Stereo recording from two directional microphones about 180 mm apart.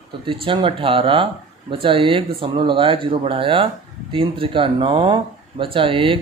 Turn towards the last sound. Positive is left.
turn(degrees=-30)  # may be behind; listen again after turning